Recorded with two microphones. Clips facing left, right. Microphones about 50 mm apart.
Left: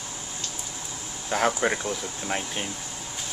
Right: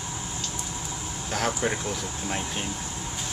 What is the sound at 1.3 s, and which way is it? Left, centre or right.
Speech, centre.